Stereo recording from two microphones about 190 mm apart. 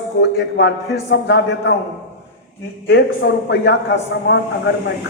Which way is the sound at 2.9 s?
60° left (ahead or behind).